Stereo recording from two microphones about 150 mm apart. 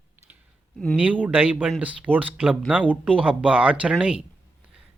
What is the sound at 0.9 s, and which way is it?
Speech, 10° right (ahead or behind).